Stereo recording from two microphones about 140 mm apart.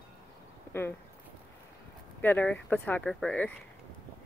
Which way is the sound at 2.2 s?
15° left (ahead or behind).